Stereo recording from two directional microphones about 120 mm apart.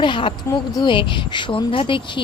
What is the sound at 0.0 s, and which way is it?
Speech, 45° left (ahead or behind).